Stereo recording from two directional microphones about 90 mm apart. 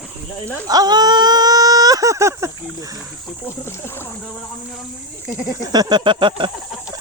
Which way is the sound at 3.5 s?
25° left (ahead or behind).